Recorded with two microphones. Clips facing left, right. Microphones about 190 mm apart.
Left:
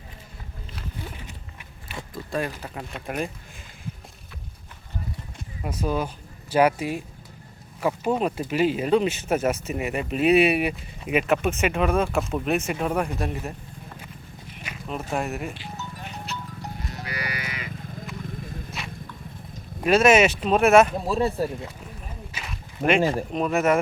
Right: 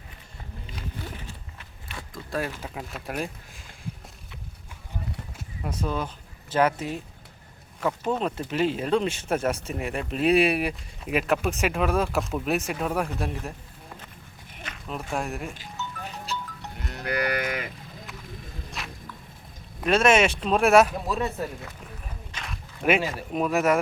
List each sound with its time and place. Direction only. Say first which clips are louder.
1.3 s biting: left 1 dB; 20° left (ahead or behind)
2.1 s speech: left 2 dB; 5° right (ahead or behind)
5.8 s speech: left 4 dB; 10° left (ahead or behind)
14.6 s speech: left 2 dB; 5° left (ahead or behind)
16.8 s livestock: right 9 dB; 60° right (ahead or behind)
18.8 s walk: right 1 dB; centre (ahead or behind)
19.8 s speech: left 3 dB; 5° left (ahead or behind)
20.9 s speech: left 4 dB; 30° left (ahead or behind)
22.3 s a sound: right 2 dB; 5° left (ahead or behind)
23.0 s speech: left 7 dB; 45° left (ahead or behind)
23.3 s speech: right 3 dB; centre (ahead or behind)